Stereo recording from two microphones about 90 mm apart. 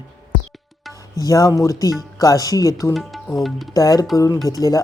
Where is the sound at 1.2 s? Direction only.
40° left (ahead or behind).